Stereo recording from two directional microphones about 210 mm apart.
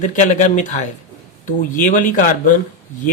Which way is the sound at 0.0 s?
35° left (ahead or behind).